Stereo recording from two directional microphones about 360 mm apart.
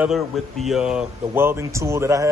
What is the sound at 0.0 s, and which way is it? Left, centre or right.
Speech, centre.